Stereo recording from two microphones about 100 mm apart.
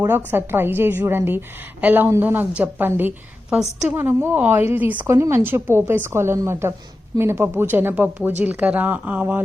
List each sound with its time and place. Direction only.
0.3 s a woman's voice: 20° right (ahead or behind)
3.5 s a woman's voice: 5° right (ahead or behind)
3.9 s a woman's voice: 25° right (ahead or behind)